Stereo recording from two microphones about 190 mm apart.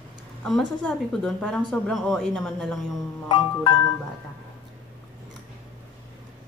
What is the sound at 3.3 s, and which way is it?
Music, 25° left (ahead or behind).